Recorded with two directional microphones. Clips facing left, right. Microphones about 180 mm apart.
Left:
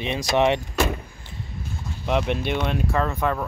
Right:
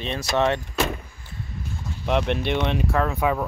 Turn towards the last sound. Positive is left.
turn(degrees=-5)  # may be behind; listen again after turning